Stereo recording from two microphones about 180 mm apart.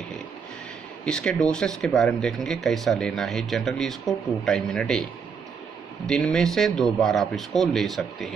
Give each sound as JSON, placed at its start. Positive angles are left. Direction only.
{"t": 1.0, "sound": "speech", "side_deg": 5}
{"t": 6.0, "sound": "speech", "side_deg": 5}